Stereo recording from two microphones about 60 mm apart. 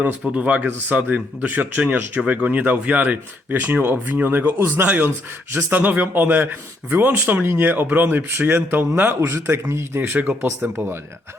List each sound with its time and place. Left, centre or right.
0.0 s speech: right
4.9 s a man's voice: right
10.1 s a man's voice: right